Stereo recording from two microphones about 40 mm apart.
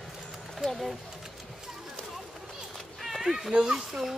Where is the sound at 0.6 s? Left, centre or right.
Centre.